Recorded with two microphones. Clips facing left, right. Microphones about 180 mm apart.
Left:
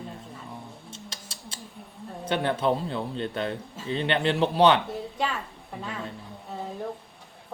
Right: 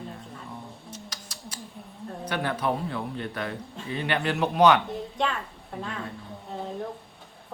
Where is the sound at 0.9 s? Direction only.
25° left (ahead or behind).